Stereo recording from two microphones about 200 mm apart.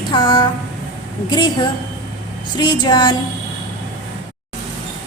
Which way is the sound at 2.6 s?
20° left (ahead or behind).